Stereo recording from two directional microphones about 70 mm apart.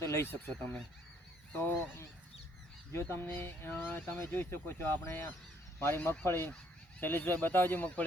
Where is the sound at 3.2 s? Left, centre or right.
Left.